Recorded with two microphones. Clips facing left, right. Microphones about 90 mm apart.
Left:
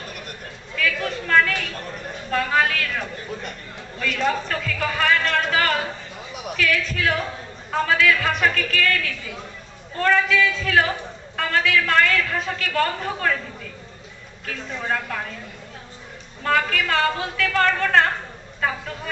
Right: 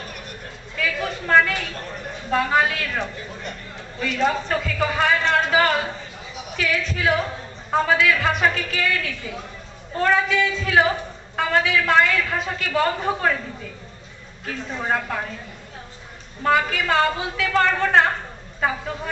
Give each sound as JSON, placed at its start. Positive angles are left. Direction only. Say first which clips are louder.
{"t": 0.8, "sound": "a woman's voice", "louder": "left 1 dB", "side_deg": -10}
{"t": 4.0, "sound": "a woman's voice", "louder": "right 1 dB", "side_deg": -15}
{"t": 14.8, "sound": "a woman's voice", "louder": "right 2 dB", "side_deg": -15}
{"t": 16.4, "sound": "a woman's voice", "louder": "right 1 dB", "side_deg": -10}